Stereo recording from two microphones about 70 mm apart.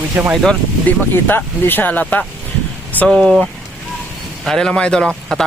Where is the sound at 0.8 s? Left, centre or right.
Left.